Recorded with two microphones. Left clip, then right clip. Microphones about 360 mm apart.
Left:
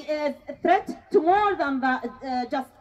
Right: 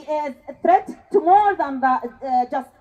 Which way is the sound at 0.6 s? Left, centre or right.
Centre.